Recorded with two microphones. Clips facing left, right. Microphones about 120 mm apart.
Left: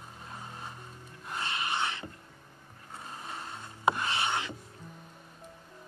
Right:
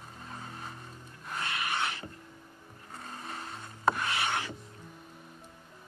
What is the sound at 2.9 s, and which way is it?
Boat, 5° left (ahead or behind).